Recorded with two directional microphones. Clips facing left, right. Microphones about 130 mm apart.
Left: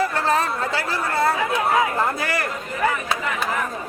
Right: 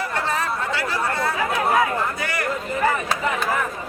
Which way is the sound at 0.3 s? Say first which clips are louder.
Left 3 dB; 35° left (ahead or behind).